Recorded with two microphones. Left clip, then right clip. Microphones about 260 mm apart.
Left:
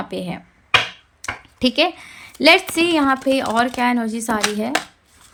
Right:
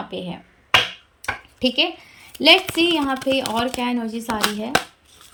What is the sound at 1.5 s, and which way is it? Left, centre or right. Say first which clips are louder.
A woman's voice: left 3 dB; centre.